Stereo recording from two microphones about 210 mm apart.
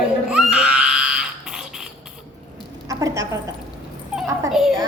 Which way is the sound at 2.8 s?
15° right (ahead or behind).